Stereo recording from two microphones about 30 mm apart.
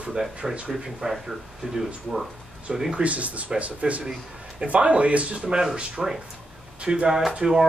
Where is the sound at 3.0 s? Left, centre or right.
Right.